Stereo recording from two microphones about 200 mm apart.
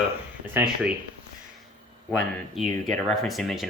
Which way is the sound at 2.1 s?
Centre (ahead or behind).